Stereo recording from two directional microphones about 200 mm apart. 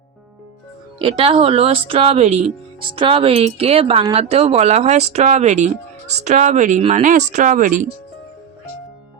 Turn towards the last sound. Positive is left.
turn(degrees=-40)  # may be behind; listen again after turning